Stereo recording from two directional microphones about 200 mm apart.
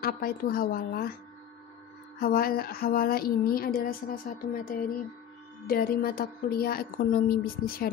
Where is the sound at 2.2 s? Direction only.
50° left (ahead or behind).